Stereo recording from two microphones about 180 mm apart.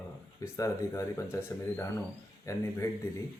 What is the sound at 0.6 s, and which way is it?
Speech, 15° left (ahead or behind).